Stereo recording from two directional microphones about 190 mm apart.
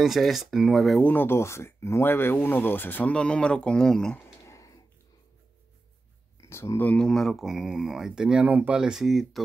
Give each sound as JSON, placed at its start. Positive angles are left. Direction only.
{"t": 0.0, "sound": "speech", "side_deg": 0}
{"t": 4.5, "sound": "a sound", "side_deg": 15}
{"t": 6.5, "sound": "speech", "side_deg": 15}